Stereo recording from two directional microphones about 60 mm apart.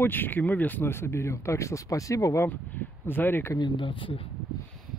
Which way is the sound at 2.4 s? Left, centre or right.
Left.